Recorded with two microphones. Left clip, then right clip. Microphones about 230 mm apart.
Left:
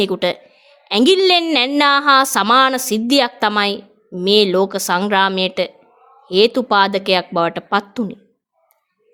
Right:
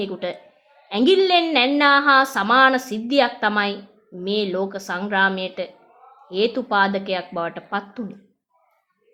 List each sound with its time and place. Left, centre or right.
0.0 s speech: left